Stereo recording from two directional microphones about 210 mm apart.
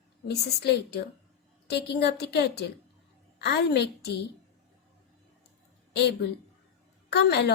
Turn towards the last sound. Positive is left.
turn(degrees=50)  # may be behind; listen again after turning